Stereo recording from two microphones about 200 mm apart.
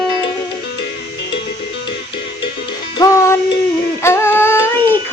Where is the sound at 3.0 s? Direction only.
20° left (ahead or behind).